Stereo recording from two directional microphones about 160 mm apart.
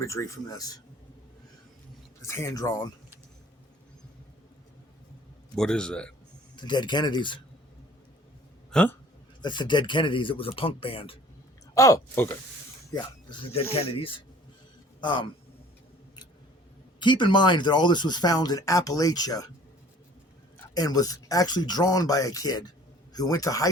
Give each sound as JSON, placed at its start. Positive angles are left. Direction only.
{"t": 0.0, "sound": "speech", "side_deg": 20}
{"t": 2.2, "sound": "speech", "side_deg": 15}
{"t": 5.5, "sound": "a man's voice", "side_deg": 5}
{"t": 6.6, "sound": "speech", "side_deg": 30}
{"t": 8.7, "sound": "speech", "side_deg": 10}
{"t": 9.4, "sound": "speech", "side_deg": 30}
{"t": 11.7, "sound": "speech", "side_deg": 20}
{"t": 13.8, "sound": "speech", "side_deg": 35}
{"t": 17.0, "sound": "speech", "side_deg": 30}
{"t": 20.7, "sound": "speech", "side_deg": 25}